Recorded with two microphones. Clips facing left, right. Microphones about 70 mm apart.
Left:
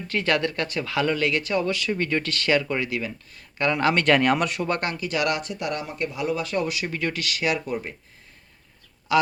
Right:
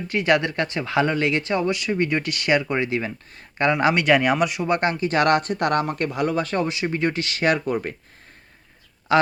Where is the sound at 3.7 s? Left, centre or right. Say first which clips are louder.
Right 1 dB; centre.